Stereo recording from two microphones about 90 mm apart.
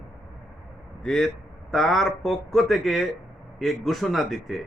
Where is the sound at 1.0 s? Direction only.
5° left (ahead or behind).